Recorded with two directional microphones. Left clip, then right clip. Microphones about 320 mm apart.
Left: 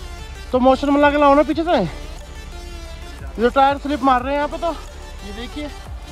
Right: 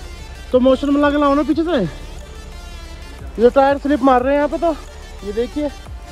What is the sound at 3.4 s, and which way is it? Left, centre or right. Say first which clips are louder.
Speech: right 3 dB; left.